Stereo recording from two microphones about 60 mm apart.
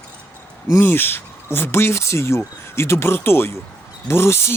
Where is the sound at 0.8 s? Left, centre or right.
Left.